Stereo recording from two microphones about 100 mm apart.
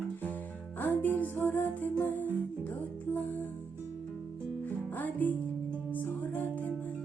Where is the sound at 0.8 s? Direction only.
20° left (ahead or behind).